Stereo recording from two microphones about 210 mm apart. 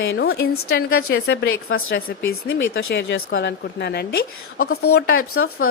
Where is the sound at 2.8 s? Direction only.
65° left (ahead or behind); by 4.2 s 50° left (ahead or behind).